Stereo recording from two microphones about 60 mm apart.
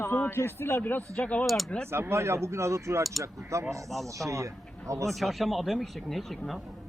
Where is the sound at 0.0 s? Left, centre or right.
Left.